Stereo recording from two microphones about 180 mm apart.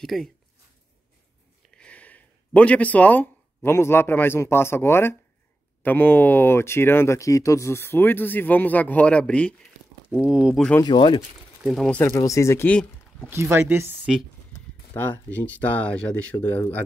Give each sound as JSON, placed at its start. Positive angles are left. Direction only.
{"t": 0.0, "sound": "speech", "side_deg": 0}
{"t": 1.8, "sound": "speech", "side_deg": 10}
{"t": 10.1, "sound": "speech", "side_deg": -5}
{"t": 10.8, "sound": "speech", "side_deg": 25}
{"t": 11.6, "sound": "speech", "side_deg": 0}
{"t": 12.0, "sound": "speech", "side_deg": 15}
{"t": 13.3, "sound": "speech", "side_deg": -15}
{"t": 15.0, "sound": "speech", "side_deg": 10}